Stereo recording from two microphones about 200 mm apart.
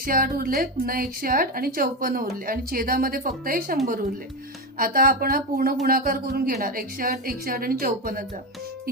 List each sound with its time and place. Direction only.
0.0 s a woman's voice: 45° right (ahead or behind)
4.8 s a woman's voice: 45° right (ahead or behind)